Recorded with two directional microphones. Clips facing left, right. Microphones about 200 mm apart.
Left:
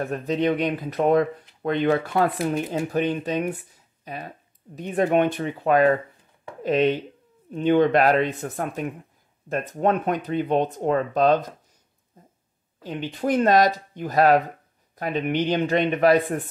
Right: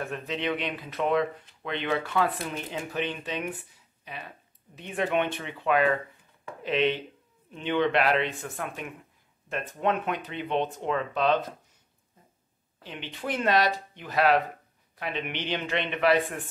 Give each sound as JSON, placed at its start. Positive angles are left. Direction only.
{"t": 0.0, "sound": "speech", "side_deg": 40}
{"t": 12.8, "sound": "speech", "side_deg": 40}